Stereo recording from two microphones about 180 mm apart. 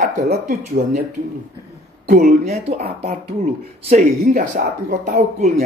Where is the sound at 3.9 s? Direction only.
45° right (ahead or behind).